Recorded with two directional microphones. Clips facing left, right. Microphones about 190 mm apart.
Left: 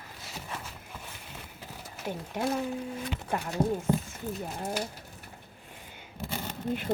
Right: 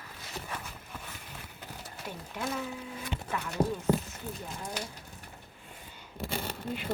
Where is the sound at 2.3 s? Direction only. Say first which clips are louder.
Left 5 dB; 45° left (ahead or behind).